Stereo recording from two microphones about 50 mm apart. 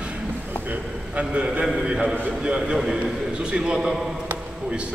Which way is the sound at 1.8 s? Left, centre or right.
Centre.